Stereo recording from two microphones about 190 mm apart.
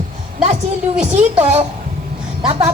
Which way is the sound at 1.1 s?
35° right (ahead or behind).